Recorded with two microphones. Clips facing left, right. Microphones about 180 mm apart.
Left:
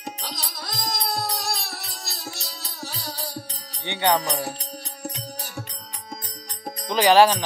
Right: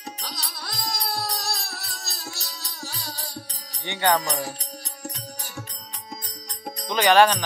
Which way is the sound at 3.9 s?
20° left (ahead or behind).